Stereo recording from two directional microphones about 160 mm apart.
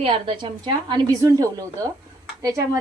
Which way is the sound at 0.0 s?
35° right (ahead or behind).